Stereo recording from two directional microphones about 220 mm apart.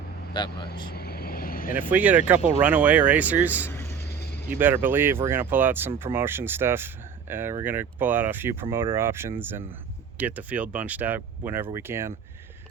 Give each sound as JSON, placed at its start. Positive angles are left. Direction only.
{"t": 0.3, "sound": "speech", "side_deg": 20}
{"t": 0.9, "sound": "vehicle", "side_deg": 45}
{"t": 1.9, "sound": "speech", "side_deg": -5}
{"t": 3.7, "sound": "vehicle", "side_deg": 15}
{"t": 4.5, "sound": "speech", "side_deg": -10}